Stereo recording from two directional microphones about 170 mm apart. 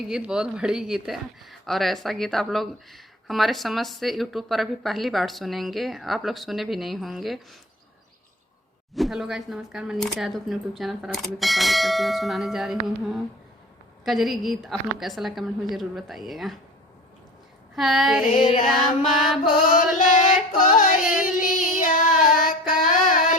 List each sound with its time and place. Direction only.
0.1 s speech: 5° right (ahead or behind)
9.0 s speech: centre (ahead or behind)
17.7 s speech: centre (ahead or behind)
19.6 s music: 50° left (ahead or behind)
21.2 s child singing: 50° left (ahead or behind)
22.2 s female singing: 50° left (ahead or behind)